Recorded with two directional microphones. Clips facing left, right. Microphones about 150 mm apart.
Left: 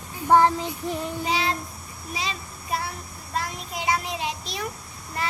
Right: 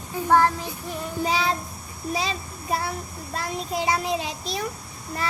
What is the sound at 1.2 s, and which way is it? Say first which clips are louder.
Speech: right 4 dB; 40° right (ahead or behind).